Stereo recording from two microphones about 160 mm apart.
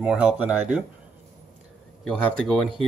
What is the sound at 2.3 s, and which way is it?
Speech, 5° left (ahead or behind).